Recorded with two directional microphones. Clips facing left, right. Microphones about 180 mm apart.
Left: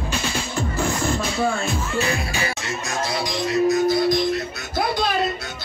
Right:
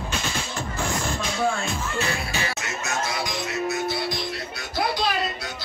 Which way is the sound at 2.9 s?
35° left (ahead or behind).